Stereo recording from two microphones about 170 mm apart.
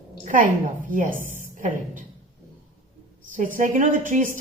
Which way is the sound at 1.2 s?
50° left (ahead or behind).